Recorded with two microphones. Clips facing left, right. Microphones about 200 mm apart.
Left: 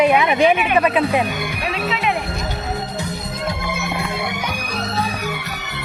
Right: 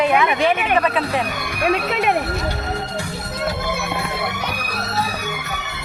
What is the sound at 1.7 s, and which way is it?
Speech, 50° right (ahead or behind).